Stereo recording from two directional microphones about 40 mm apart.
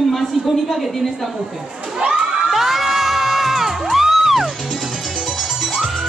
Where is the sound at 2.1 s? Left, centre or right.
Centre.